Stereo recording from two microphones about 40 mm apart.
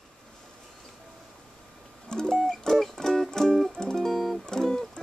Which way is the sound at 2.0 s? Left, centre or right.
Centre.